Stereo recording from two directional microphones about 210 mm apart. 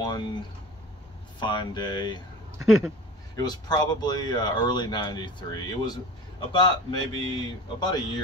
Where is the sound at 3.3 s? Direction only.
20° left (ahead or behind).